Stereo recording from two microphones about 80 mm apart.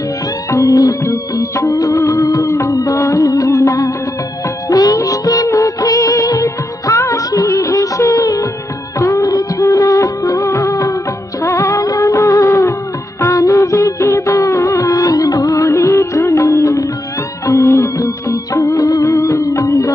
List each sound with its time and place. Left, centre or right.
0.5 s music: left
4.6 s music of bollywood: left
9.0 s music: left